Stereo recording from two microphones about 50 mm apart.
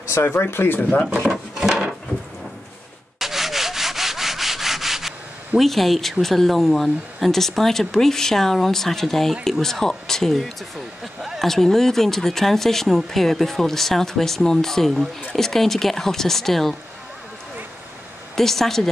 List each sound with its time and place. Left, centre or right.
0.2 s speech: left
0.7 s speech: left
1.2 s speech: centre
3.2 s rub: centre
5.6 s speech: centre
18.3 s speech: centre